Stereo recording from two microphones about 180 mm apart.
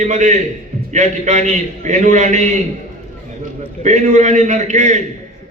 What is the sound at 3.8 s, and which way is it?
A man's voice, 40° right (ahead or behind).